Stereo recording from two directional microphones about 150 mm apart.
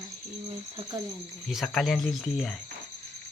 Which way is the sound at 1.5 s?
Centre (ahead or behind).